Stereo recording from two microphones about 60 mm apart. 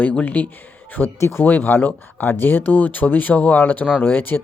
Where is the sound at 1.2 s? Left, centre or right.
Left.